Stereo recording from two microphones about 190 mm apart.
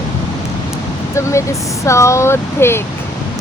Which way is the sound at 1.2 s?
15° left (ahead or behind).